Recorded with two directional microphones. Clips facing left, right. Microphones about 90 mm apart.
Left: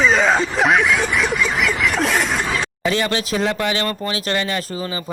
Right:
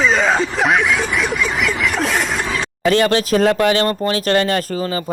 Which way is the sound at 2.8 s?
50° right (ahead or behind).